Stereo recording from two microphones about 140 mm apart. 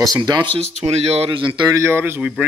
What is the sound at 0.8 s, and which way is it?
Speech, 45° right (ahead or behind).